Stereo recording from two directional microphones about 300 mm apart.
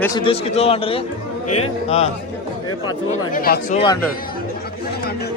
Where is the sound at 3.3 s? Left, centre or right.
Left.